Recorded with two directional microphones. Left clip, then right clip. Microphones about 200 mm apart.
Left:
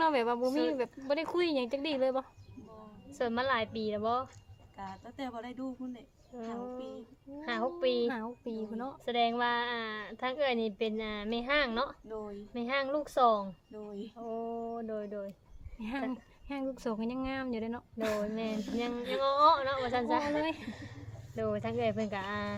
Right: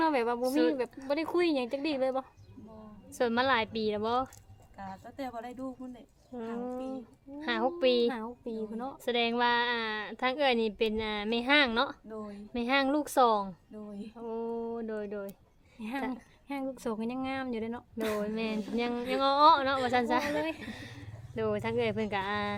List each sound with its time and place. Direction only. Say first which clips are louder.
0.0 s speech: right 1 dB; 5° right (ahead or behind)
3.1 s a woman's voice: right 4 dB; 55° right (ahead or behind)
4.8 s a woman's voice: right 1 dB; 10° right (ahead or behind)
6.3 s a woman's voice: right 3 dB; 50° right (ahead or behind)
8.0 s speech: right 3 dB; 5° right (ahead or behind)
9.0 s a woman's voice: right 2 dB; 55° right (ahead or behind)
12.0 s a woman's voice: left 1 dB; 10° right (ahead or behind)
12.5 s a woman's voice: right 4 dB; 55° right (ahead or behind)
13.7 s a woman's voice: left 1 dB; 10° right (ahead or behind)
14.2 s a woman's voice: right 3 dB; 55° right (ahead or behind)
15.8 s a woman's voice: right 1 dB; 5° right (ahead or behind)
18.2 s a woman's voice: right 2 dB; 55° right (ahead or behind)